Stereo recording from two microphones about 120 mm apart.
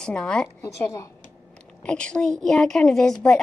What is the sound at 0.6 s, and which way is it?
Speech, 25° left (ahead or behind).